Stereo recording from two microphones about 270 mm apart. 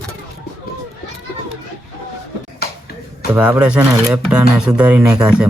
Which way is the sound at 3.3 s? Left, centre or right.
Centre.